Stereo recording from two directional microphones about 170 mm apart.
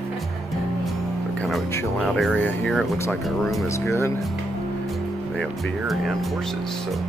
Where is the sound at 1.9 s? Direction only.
Centre (ahead or behind).